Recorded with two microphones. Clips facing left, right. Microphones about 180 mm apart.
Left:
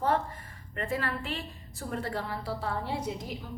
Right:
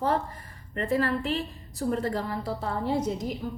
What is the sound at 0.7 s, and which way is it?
A woman's voice, 40° right (ahead or behind).